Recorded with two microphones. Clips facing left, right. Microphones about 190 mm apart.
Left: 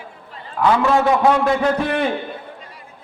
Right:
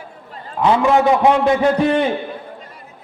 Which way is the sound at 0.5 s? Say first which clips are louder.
Right 2 dB; 20° right (ahead or behind).